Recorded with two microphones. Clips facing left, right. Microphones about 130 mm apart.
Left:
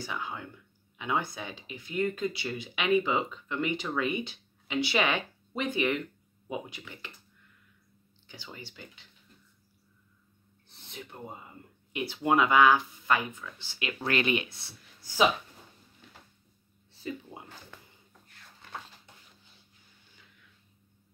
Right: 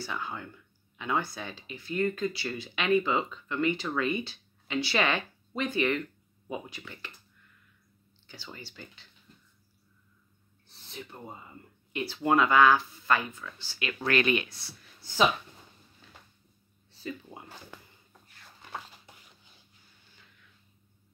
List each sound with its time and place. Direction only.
0.0 s speech: 15° left (ahead or behind)
8.5 s speech: 15° left (ahead or behind)
11.1 s speech: 10° left (ahead or behind)
15.0 s speech: 10° left (ahead or behind)
17.3 s a sound: 10° left (ahead or behind)